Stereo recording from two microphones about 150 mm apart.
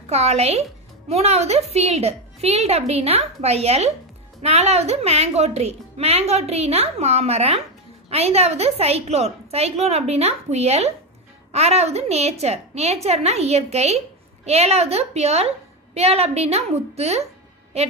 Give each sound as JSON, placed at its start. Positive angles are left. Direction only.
{"t": 0.1, "sound": "a woman's voice", "side_deg": -45}